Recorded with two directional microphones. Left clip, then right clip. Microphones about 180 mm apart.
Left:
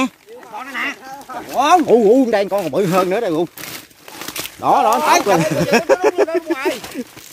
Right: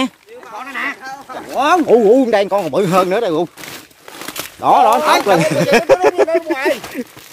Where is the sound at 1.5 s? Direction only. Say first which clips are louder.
Left 1 dB; 55° left (ahead or behind).